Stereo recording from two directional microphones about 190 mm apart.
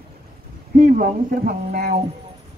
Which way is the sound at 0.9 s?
50° right (ahead or behind).